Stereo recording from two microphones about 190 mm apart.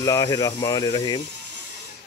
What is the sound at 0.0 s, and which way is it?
Speech, 20° left (ahead or behind).